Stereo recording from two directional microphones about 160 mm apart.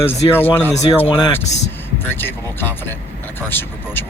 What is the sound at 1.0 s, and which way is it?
Speech, 30° left (ahead or behind).